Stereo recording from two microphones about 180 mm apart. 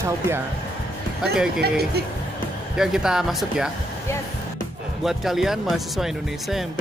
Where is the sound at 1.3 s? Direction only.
5° right (ahead or behind).